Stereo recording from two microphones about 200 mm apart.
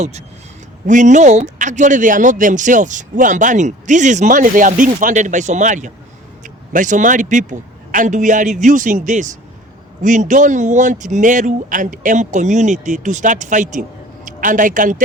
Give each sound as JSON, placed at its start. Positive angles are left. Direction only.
{"t": 0.9, "sound": "a man's voice", "side_deg": -40}